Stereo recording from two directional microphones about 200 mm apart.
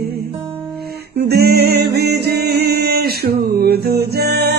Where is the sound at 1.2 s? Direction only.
50° right (ahead or behind).